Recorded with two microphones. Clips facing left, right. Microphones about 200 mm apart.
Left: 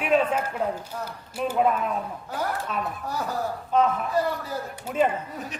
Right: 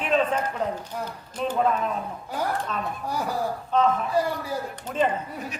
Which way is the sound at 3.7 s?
10° left (ahead or behind).